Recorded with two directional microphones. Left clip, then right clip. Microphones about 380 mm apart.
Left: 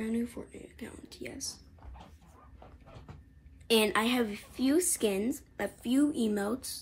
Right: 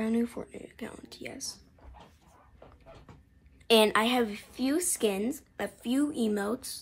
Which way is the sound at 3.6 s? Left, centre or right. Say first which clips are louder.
Right 4 dB; centre.